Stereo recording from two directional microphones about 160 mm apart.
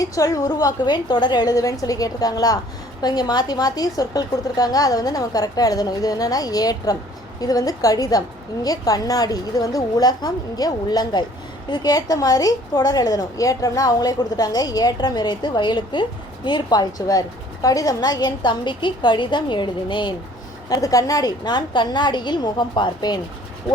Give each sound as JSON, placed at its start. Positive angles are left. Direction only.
{"t": 0.0, "sound": "a woman's voice", "side_deg": 20}